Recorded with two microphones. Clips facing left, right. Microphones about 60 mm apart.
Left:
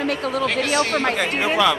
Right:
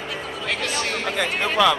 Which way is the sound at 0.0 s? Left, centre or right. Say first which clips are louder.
Left 8 dB; left.